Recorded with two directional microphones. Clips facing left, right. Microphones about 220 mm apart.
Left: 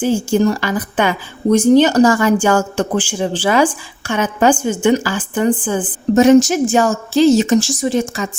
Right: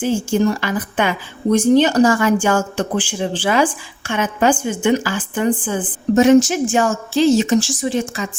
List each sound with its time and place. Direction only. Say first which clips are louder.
0.0 s speech: left 2 dB; 40° left (ahead or behind)